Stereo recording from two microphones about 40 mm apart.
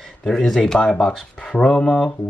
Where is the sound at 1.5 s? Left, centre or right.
Centre.